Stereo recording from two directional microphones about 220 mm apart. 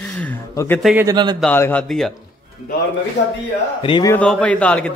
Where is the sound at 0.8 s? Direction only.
5° right (ahead or behind).